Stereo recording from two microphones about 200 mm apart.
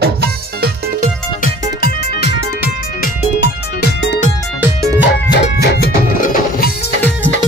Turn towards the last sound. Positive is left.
turn(degrees=50)  # may be behind; listen again after turning